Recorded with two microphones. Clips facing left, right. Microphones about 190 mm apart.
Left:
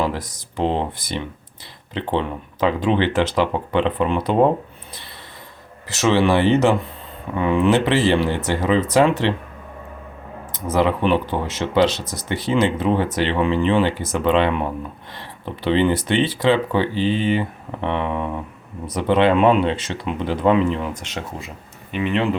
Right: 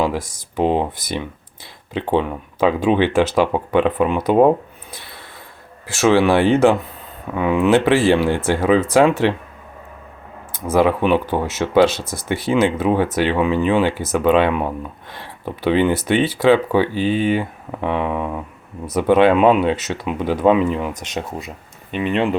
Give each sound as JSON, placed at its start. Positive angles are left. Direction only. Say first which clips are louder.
{"t": 0.2, "sound": "speech", "louder": "right 3 dB", "side_deg": -45}
{"t": 0.6, "sound": "speech", "louder": "right 3 dB", "side_deg": -10}
{"t": 1.9, "sound": "speech", "louder": "right 3 dB", "side_deg": -10}
{"t": 5.9, "sound": "speech", "louder": "right 3 dB", "side_deg": -10}
{"t": 10.7, "sound": "speech", "louder": "right 3 dB", "side_deg": -10}
{"t": 11.9, "sound": "speech", "louder": "right 2 dB", "side_deg": -50}
{"t": 12.3, "sound": "speech", "louder": "right 2 dB", "side_deg": -10}
{"t": 21.9, "sound": "speech", "louder": "right 2 dB", "side_deg": -20}